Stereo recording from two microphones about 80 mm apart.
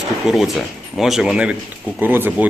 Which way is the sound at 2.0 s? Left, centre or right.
Right.